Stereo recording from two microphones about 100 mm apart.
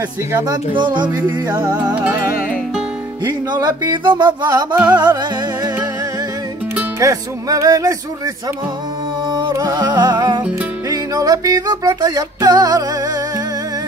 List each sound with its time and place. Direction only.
0.5 s speech: 50° right (ahead or behind)
3.3 s speech: 40° right (ahead or behind)
7.0 s music: 35° right (ahead or behind)
9.3 s music: 40° right (ahead or behind)